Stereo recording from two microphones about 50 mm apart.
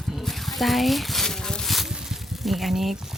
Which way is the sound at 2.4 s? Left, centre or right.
Centre.